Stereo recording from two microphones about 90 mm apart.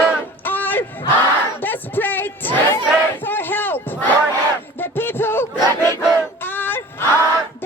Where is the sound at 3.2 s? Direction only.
25° left (ahead or behind).